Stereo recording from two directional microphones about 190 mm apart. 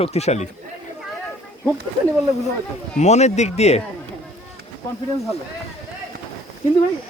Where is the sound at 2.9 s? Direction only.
35° left (ahead or behind).